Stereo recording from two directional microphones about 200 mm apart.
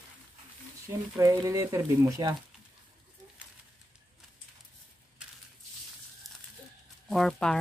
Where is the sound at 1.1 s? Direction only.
15° right (ahead or behind).